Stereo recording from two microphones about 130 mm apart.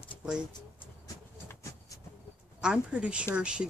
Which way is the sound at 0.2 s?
5° right (ahead or behind).